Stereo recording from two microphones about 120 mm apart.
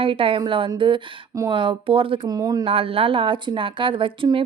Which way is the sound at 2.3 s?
30° right (ahead or behind).